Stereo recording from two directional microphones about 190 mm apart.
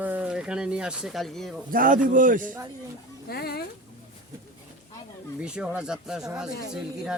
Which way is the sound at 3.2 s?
55° left (ahead or behind).